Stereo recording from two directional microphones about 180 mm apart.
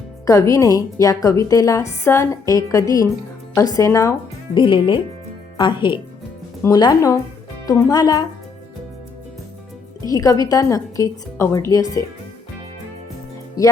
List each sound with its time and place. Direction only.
0.3 s a woman's voice: 20° left (ahead or behind)
4.5 s a woman's voice: 25° left (ahead or behind)
10.1 s a woman's voice: 20° left (ahead or behind)
13.6 s a woman's voice: 20° left (ahead or behind)